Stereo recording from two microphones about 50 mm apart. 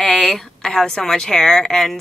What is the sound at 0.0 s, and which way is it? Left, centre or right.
A woman's voice, centre.